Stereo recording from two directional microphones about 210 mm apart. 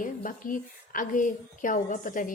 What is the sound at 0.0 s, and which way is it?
A woman's voice, 40° left (ahead or behind).